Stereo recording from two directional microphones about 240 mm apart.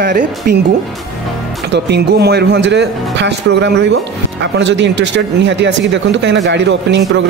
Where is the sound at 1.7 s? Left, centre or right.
Right.